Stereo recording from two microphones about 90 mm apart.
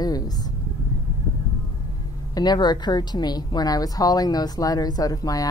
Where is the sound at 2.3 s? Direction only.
50° left (ahead or behind).